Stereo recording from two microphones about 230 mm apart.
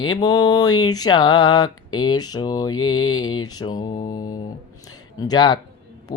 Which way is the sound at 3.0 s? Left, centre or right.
Left.